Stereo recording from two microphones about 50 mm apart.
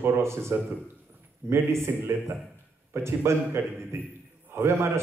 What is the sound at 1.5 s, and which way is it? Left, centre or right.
A man's voice, right.